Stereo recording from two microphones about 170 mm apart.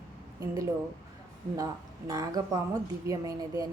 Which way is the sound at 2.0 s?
20° right (ahead or behind).